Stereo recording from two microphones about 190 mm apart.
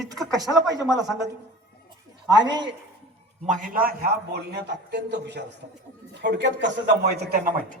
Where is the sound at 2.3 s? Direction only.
20° right (ahead or behind).